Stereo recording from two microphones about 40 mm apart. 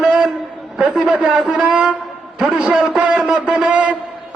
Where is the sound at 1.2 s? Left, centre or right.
Centre.